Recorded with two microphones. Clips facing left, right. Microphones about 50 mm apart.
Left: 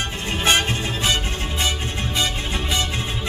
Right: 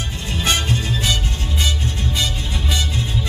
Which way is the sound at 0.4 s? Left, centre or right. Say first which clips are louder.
Left 1 dB; left.